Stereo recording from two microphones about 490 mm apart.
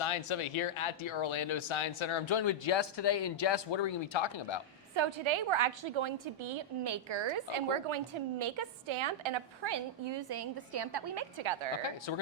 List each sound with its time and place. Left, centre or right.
0.0 s speech: left
4.9 s a woman's voice: right
11.8 s speech: left